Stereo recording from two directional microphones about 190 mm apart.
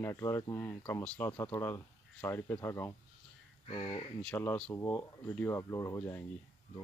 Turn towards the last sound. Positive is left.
turn(degrees=15)  # may be behind; listen again after turning